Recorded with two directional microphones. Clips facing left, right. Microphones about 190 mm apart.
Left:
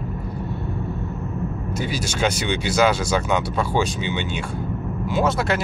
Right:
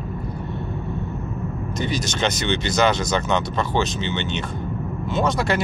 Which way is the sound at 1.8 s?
5° left (ahead or behind).